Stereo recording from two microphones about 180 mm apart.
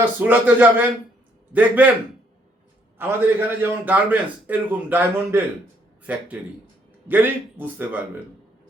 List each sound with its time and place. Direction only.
0.0 s a man's voice: 10° right (ahead or behind)
3.0 s a man's voice: 10° right (ahead or behind)